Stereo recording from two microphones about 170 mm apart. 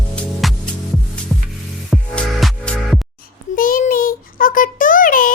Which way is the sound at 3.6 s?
55° left (ahead or behind).